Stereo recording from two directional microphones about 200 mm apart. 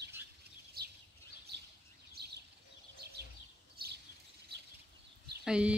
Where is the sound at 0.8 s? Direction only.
50° right (ahead or behind).